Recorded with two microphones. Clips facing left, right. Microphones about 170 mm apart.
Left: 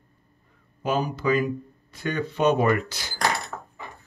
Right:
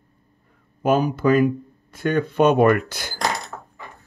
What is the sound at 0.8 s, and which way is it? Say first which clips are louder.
Speech: right 6 dB; 55° right (ahead or behind).